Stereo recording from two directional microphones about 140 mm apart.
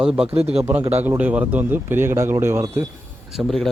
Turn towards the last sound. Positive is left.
turn(degrees=0)  # may be behind; listen again after turning